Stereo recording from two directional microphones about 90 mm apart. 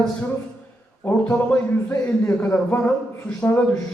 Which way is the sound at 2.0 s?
20° left (ahead or behind).